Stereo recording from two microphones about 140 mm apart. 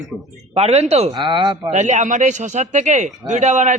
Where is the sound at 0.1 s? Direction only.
Centre (ahead or behind).